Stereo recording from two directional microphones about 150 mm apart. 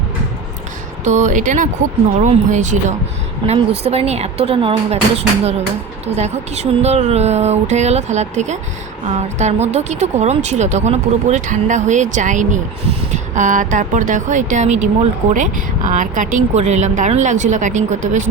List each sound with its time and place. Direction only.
1.0 s speech: 55° right (ahead or behind)
3.4 s a woman's voice: 35° right (ahead or behind)
3.8 s speech: 45° right (ahead or behind)